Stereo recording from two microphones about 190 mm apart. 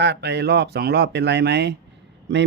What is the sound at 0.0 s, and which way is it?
Speech, 60° right (ahead or behind).